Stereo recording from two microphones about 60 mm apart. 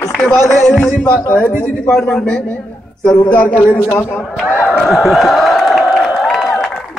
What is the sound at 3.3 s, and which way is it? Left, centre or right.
Speech, left.